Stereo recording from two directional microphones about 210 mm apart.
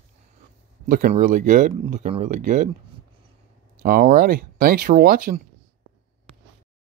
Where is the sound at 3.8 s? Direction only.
40° right (ahead or behind).